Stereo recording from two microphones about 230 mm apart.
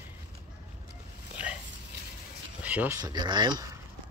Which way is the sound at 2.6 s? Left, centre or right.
Centre.